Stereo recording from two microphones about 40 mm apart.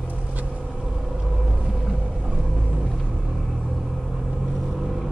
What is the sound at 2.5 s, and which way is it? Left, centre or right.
Vehicle, right.